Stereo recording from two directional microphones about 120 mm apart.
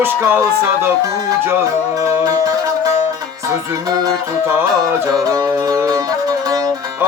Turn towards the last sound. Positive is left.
turn(degrees=-30)  # may be behind; listen again after turning